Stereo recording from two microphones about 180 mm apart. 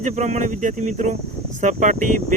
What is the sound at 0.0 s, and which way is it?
Speech, 40° right (ahead or behind).